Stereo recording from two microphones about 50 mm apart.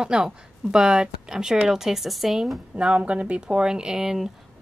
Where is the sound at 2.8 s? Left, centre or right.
Right.